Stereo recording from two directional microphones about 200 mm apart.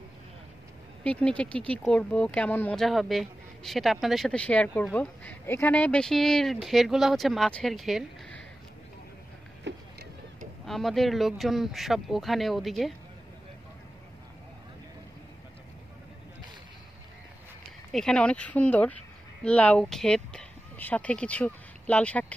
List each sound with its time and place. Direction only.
1.0 s speech: 5° left (ahead or behind)
9.7 s boat: 60° right (ahead or behind)
10.6 s speech: centre (ahead or behind)
17.9 s speech: 5° left (ahead or behind)